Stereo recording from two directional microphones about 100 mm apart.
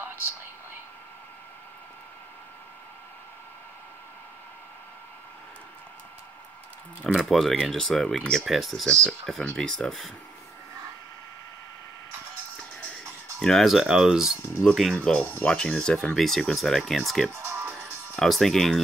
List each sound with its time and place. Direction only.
7.2 s speech: centre (ahead or behind)
13.4 s speech: 5° left (ahead or behind)
15.0 s speech: 10° left (ahead or behind)
17.3 s music: 25° right (ahead or behind)
18.1 s speech: centre (ahead or behind)